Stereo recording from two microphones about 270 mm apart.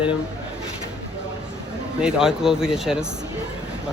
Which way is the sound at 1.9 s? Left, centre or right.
Centre.